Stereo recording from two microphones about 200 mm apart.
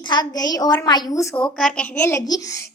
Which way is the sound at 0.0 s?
20° left (ahead or behind).